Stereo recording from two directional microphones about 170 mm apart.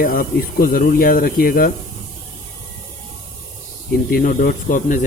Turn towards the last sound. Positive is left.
turn(degrees=50)  # may be behind; listen again after turning